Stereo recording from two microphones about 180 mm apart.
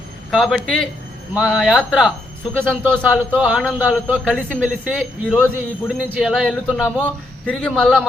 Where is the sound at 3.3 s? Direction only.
5° right (ahead or behind).